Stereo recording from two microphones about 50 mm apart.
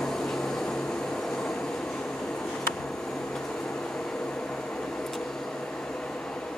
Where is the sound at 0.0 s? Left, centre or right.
Centre.